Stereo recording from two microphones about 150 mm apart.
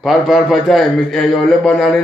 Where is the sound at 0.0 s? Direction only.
Centre (ahead or behind).